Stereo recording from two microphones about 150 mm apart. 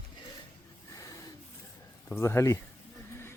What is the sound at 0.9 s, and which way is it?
Snort, 20° left (ahead or behind).